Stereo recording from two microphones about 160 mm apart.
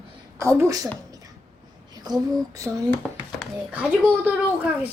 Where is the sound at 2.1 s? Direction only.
25° right (ahead or behind).